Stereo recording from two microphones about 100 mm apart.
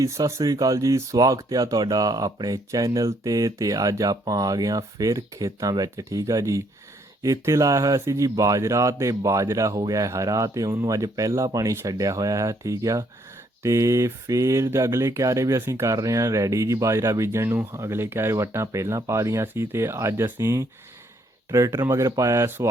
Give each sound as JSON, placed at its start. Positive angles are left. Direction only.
{"t": 0.0, "sound": "speech", "side_deg": -30}